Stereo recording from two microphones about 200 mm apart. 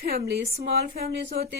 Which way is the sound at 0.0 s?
50° right (ahead or behind).